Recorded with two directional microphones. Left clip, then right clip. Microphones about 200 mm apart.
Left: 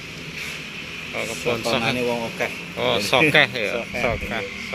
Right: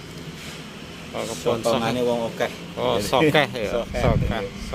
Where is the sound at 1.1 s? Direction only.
10° right (ahead or behind).